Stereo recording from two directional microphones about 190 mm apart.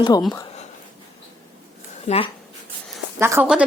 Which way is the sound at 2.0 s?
35° left (ahead or behind).